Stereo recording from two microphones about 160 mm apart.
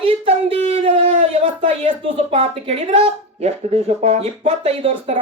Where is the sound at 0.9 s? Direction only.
40° right (ahead or behind).